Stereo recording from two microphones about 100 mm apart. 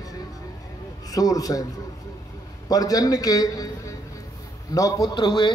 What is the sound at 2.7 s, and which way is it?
A man's voice, 40° left (ahead or behind).